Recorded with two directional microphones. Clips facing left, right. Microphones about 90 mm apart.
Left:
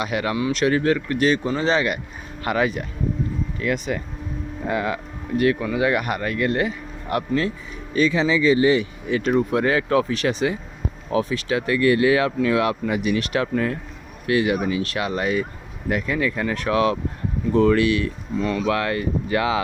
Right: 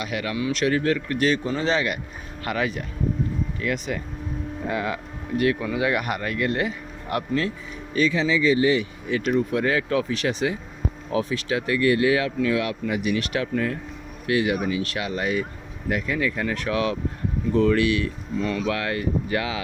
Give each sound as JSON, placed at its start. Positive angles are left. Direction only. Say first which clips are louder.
{"t": 0.0, "sound": "speech", "louder": "left 4 dB", "side_deg": 25}
{"t": 2.4, "sound": "speech", "louder": "left 4 dB", "side_deg": 5}
{"t": 7.2, "sound": "speech", "louder": "left 2 dB", "side_deg": 10}
{"t": 7.9, "sound": "speech", "louder": "left 2 dB", "side_deg": 30}